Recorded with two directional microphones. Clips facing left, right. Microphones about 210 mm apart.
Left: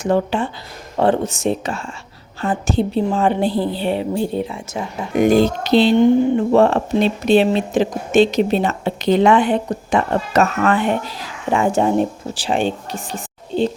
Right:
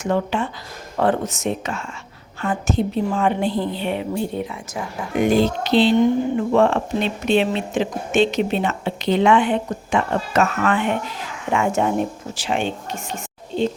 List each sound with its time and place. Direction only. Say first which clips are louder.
0.0 s speech: left 3 dB; 35° left (ahead or behind)
5.2 s speech: left 3 dB; 45° left (ahead or behind)